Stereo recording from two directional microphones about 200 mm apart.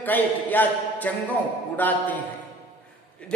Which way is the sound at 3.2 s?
5° left (ahead or behind).